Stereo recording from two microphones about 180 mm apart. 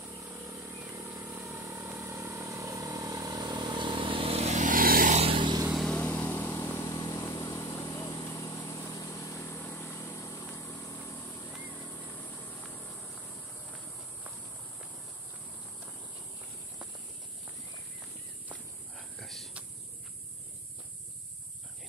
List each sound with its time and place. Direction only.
0.2 s vehicle: 15° right (ahead or behind); by 5.1 s 55° right (ahead or behind)
5.1 s vehicle: 30° right (ahead or behind)
5.7 s vehicle: centre (ahead or behind)
18.9 s a sound: centre (ahead or behind)